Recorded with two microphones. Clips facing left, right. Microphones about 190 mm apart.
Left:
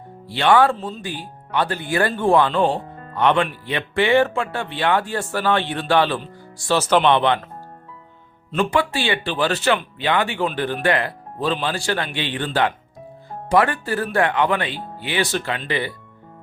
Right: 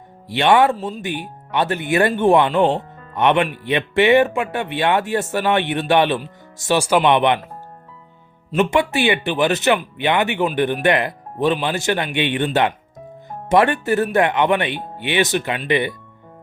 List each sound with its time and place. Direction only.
0.3 s speech: 20° right (ahead or behind)
0.8 s speech: 5° right (ahead or behind)
1.5 s speech: 20° right (ahead or behind)
8.5 s speech: 20° right (ahead or behind)